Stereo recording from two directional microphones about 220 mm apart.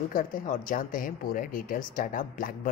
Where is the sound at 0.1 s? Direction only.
40° left (ahead or behind).